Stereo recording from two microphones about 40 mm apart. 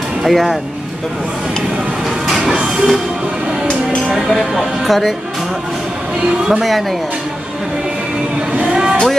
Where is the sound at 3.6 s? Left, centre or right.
Centre.